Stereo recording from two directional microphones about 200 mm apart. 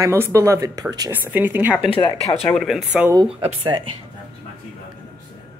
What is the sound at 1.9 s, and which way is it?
Speech, 25° left (ahead or behind).